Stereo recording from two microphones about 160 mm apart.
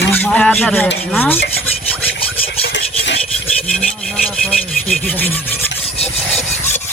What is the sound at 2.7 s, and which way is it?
Filing, 90° left.